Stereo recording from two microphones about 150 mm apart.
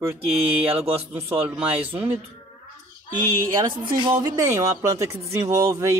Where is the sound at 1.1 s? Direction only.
15° right (ahead or behind).